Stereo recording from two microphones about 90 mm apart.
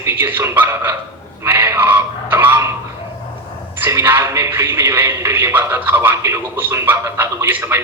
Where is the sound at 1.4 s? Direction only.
25° right (ahead or behind).